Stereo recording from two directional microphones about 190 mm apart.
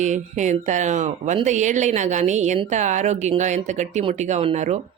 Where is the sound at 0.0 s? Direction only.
40° right (ahead or behind).